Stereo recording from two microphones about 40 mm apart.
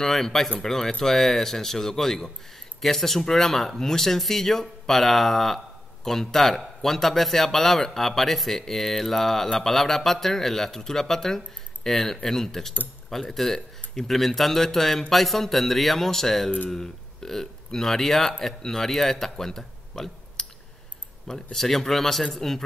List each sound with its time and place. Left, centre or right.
0.0 s a man's voice: centre
21.5 s speech: centre